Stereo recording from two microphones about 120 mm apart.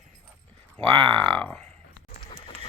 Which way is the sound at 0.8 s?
45° right (ahead or behind).